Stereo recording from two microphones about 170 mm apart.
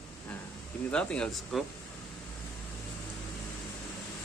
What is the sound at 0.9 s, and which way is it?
Speech, 5° left (ahead or behind).